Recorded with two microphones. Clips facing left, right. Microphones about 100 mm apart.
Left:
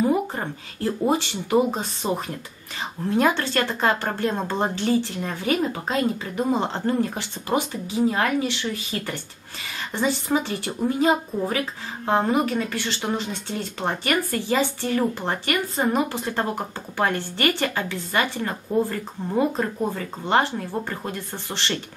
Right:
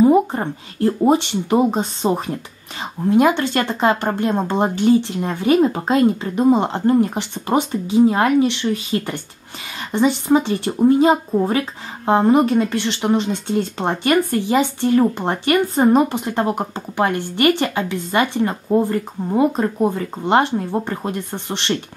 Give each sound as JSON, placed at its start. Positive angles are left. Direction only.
{"t": 0.0, "sound": "a sound", "side_deg": -20}
{"t": 1.0, "sound": "speech", "side_deg": -20}
{"t": 5.6, "sound": "speech", "side_deg": -35}
{"t": 5.9, "sound": "speech", "side_deg": -20}